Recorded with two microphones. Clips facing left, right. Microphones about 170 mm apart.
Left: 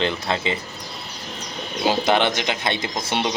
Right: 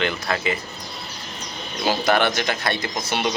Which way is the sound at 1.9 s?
20° left (ahead or behind).